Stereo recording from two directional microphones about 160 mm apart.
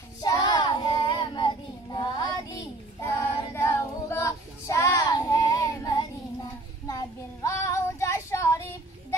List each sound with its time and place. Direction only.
0.2 s child singing: 25° left (ahead or behind)